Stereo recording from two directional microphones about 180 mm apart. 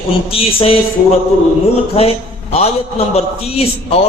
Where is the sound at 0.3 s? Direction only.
30° left (ahead or behind).